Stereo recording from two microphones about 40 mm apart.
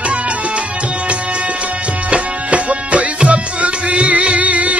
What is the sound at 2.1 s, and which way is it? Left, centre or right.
Music, right.